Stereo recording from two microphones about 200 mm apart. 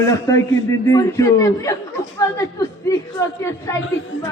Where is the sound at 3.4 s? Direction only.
15° left (ahead or behind).